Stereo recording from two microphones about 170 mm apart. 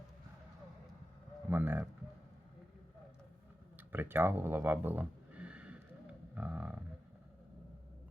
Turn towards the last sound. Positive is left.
turn(degrees=-10)  # may be behind; listen again after turning